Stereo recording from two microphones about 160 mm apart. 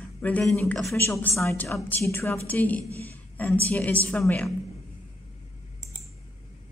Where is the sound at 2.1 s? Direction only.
15° left (ahead or behind).